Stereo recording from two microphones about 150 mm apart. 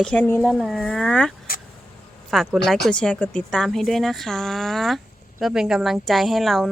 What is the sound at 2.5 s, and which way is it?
Speech, centre (ahead or behind).